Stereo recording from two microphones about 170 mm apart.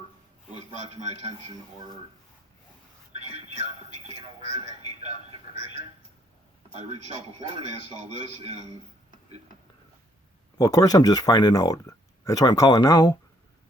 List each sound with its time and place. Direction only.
0.5 s a man's voice: 40° right (ahead or behind)
3.8 s speech: 40° right (ahead or behind)
6.7 s a man's voice: 40° right (ahead or behind)
10.6 s speech: 20° left (ahead or behind)